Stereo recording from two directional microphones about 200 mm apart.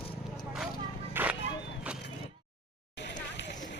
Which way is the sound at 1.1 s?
10° right (ahead or behind).